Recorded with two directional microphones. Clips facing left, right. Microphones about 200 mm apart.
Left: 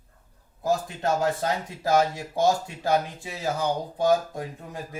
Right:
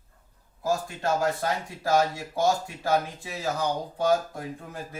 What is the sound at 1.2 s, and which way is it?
Speech, 20° left (ahead or behind).